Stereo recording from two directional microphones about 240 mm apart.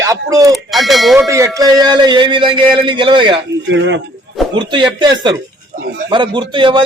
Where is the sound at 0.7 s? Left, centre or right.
Centre.